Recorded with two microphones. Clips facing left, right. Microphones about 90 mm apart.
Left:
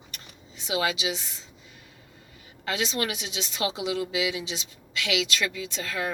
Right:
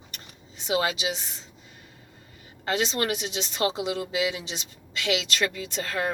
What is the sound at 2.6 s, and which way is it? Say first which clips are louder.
A woman's voice: right 2 dB; 40° right (ahead or behind).